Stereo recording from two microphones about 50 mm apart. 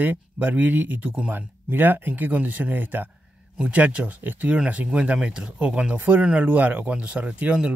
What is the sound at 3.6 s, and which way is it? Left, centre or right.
Speech, right.